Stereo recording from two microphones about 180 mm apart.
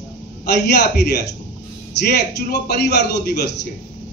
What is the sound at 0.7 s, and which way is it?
A man's voice, 65° left (ahead or behind).